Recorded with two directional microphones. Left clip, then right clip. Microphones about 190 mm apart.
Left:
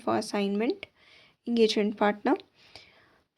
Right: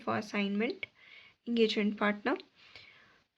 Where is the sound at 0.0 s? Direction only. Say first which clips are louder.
Left 6 dB; 35° left (ahead or behind).